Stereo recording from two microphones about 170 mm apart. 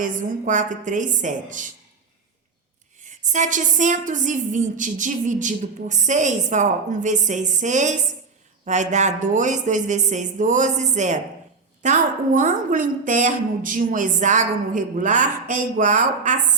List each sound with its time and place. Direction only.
0.0 s a woman's voice: 50° right (ahead or behind)
3.0 s a woman's voice: 45° right (ahead or behind)